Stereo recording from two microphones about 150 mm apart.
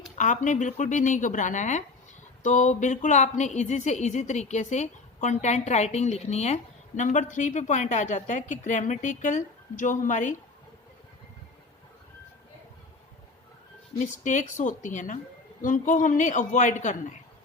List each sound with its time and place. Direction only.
0.2 s a woman's voice: 55° left (ahead or behind)
14.0 s a woman's voice: 55° left (ahead or behind)